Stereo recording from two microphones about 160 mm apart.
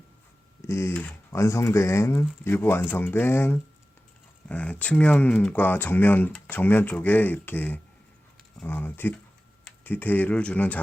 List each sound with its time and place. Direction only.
0.7 s speech: 15° left (ahead or behind)